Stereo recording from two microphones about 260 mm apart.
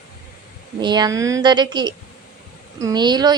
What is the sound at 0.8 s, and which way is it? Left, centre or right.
Speech, centre.